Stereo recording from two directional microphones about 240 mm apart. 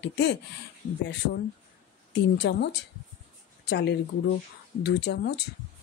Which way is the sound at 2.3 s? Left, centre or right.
Left.